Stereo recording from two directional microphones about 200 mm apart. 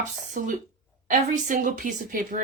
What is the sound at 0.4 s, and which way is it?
A woman's voice, 45° right (ahead or behind).